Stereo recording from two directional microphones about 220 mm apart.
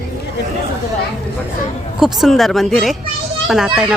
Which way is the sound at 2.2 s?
Centre (ahead or behind).